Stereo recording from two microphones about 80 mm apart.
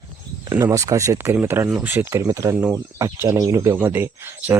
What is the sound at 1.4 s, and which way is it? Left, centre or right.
Speech, right.